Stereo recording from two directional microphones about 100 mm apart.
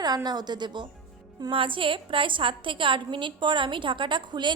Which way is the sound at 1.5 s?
60° right (ahead or behind).